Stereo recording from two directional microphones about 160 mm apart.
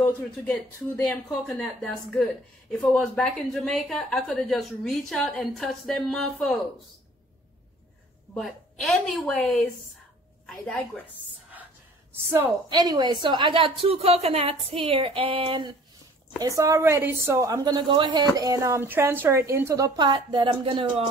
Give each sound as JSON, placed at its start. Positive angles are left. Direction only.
{"t": 0.0, "sound": "a woman's voice", "side_deg": 10}
{"t": 8.4, "sound": "a woman's voice", "side_deg": 0}
{"t": 12.1, "sound": "a woman's voice", "side_deg": -15}
{"t": 12.6, "sound": "a woman's voice", "side_deg": -25}
{"t": 16.3, "sound": "a woman's voice", "side_deg": -20}